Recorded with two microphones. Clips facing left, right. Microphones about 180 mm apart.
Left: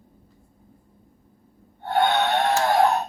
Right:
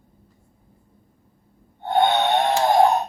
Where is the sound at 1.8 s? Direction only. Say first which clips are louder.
Right 2 dB; 20° right (ahead or behind).